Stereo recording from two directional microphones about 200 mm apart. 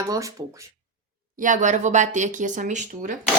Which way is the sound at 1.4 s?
40° right (ahead or behind).